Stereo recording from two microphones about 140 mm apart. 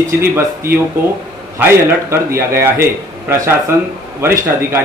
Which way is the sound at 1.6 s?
15° right (ahead or behind).